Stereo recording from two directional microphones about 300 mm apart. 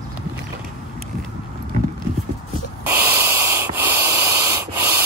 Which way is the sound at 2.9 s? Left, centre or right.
Centre.